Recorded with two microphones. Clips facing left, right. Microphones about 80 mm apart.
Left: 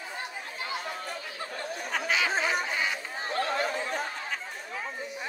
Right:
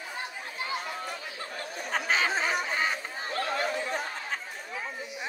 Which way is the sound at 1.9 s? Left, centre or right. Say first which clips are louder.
Right 1 dB; right.